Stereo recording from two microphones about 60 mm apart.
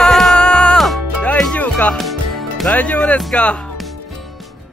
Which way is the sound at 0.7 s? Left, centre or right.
Centre.